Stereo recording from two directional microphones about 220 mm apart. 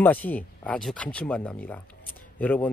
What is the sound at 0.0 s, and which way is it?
Speech, 5° left (ahead or behind).